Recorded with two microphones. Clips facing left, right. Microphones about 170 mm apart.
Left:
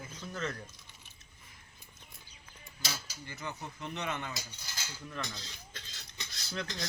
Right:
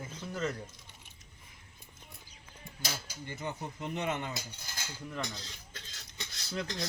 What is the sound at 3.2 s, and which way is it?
Speech, 25° right (ahead or behind).